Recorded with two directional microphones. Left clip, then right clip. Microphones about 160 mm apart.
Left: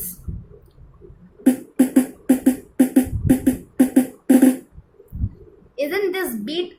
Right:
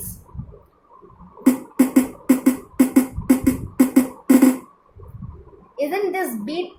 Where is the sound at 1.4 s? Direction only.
5° right (ahead or behind).